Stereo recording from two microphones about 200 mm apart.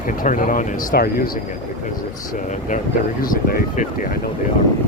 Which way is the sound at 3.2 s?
45° left (ahead or behind).